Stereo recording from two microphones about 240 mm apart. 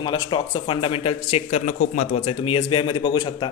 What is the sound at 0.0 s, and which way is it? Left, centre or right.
Speech, centre.